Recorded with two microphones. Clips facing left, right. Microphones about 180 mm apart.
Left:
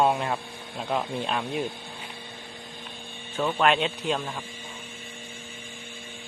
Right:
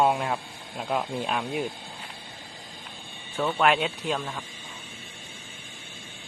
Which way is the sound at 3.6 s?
5° right (ahead or behind).